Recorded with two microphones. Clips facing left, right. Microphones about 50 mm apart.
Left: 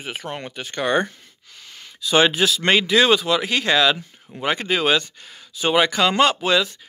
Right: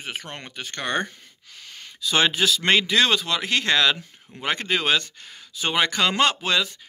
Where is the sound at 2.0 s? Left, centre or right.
Centre.